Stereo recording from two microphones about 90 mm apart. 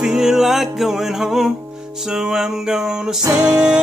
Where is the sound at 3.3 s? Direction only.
10° right (ahead or behind).